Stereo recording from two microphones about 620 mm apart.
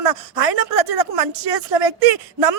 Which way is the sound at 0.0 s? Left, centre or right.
Right.